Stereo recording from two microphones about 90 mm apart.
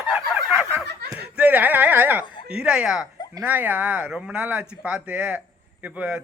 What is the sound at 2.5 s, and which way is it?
A man's voice, 10° right (ahead or behind).